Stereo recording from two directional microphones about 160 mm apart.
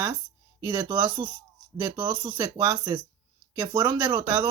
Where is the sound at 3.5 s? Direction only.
15° right (ahead or behind).